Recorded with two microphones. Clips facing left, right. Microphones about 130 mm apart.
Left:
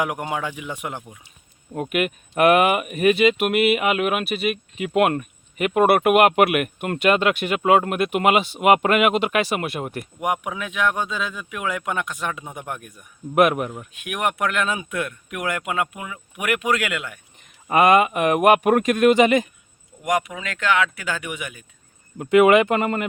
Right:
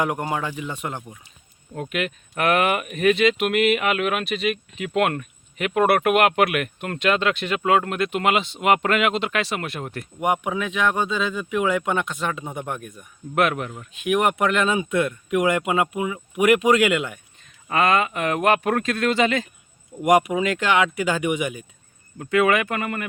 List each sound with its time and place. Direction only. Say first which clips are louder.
0.0 s speech: right 1 dB; 10° left (ahead or behind)
10.2 s speech: right 3 dB; centre (ahead or behind)
14.0 s speech: right 4 dB; centre (ahead or behind)
17.7 s speech: left 4 dB; 15° left (ahead or behind)
20.0 s speech: right 6 dB; 25° right (ahead or behind)
21.0 s speech: right 7 dB; 10° right (ahead or behind)
22.2 s speech: left 5 dB; 20° left (ahead or behind)